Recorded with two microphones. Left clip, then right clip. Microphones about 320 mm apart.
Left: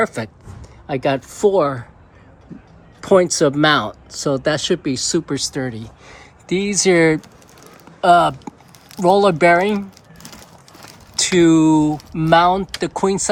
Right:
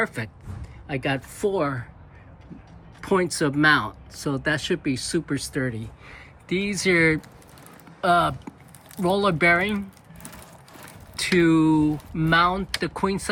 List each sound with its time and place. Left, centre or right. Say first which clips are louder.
0.0 s speech: left 7 dB; centre
3.0 s speech: left 9 dB; centre
11.2 s speech: left 6 dB; centre